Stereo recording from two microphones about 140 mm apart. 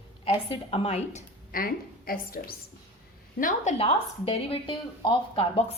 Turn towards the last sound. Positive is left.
turn(degrees=45)  # may be behind; listen again after turning